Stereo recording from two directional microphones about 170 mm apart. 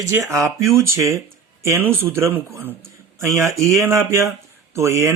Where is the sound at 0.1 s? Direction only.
20° right (ahead or behind).